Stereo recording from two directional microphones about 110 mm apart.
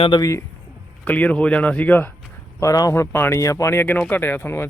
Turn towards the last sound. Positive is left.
turn(degrees=20)  # may be behind; listen again after turning